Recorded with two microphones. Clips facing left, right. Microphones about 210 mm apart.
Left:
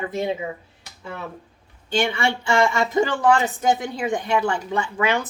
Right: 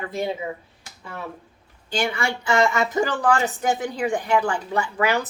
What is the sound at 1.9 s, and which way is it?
Speech, 25° left (ahead or behind).